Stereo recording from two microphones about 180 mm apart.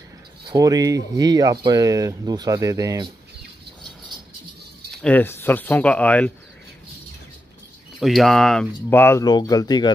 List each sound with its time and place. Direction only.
0.5 s speech: 20° right (ahead or behind)
5.0 s speech: 10° left (ahead or behind)
8.0 s speech: centre (ahead or behind)
8.9 s speech: 15° left (ahead or behind)